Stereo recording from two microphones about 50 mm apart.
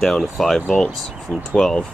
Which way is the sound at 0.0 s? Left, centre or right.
Centre.